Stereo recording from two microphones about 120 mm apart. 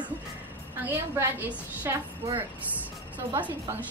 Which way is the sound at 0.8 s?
15° right (ahead or behind).